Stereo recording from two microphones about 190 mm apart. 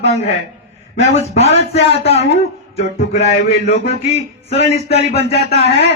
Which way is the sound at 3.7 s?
35° left (ahead or behind).